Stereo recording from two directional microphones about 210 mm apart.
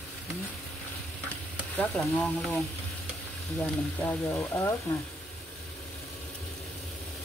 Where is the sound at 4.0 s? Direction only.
10° left (ahead or behind).